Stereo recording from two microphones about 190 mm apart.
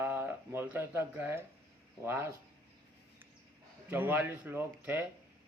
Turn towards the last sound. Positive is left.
turn(degrees=-10)  # may be behind; listen again after turning